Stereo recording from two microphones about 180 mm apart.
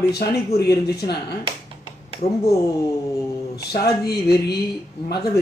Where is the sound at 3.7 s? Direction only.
60° left (ahead or behind).